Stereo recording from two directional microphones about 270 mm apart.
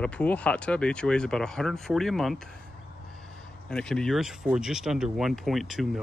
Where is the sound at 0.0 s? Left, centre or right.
Centre.